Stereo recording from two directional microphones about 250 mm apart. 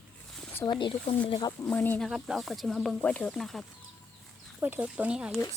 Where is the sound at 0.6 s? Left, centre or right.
Centre.